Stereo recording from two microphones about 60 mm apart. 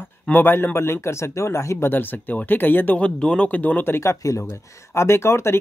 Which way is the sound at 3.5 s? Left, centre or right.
Left.